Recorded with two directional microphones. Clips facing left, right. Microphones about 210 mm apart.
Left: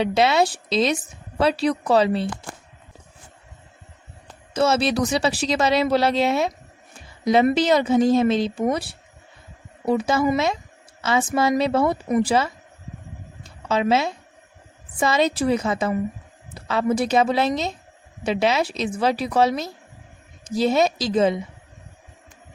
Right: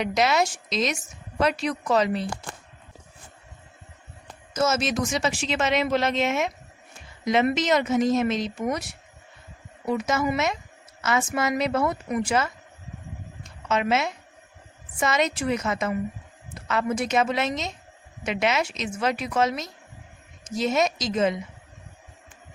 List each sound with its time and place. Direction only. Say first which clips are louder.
0.0 s a woman's voice: left 4 dB; 30° left (ahead or behind)
4.5 s a woman's voice: left 4 dB; 30° left (ahead or behind)
13.7 s a woman's voice: left 4 dB; 30° left (ahead or behind)